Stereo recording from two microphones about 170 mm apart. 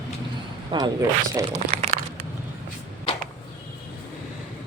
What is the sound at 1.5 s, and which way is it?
Crumpling, 40° right (ahead or behind).